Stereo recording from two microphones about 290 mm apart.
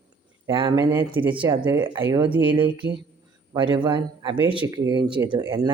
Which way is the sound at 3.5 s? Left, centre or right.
Centre.